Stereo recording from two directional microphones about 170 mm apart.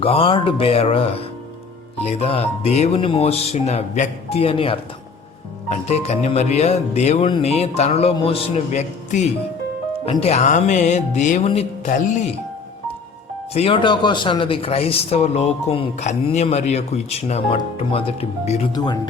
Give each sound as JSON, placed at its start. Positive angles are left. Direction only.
{"t": 0.0, "sound": "speech", "side_deg": 35}
{"t": 10.1, "sound": "music", "side_deg": 35}
{"t": 11.9, "sound": "music", "side_deg": 50}
{"t": 13.5, "sound": "speech", "side_deg": 35}
{"t": 18.7, "sound": "speech", "side_deg": 25}